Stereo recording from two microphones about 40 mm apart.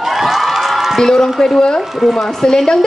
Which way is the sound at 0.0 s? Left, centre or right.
Centre.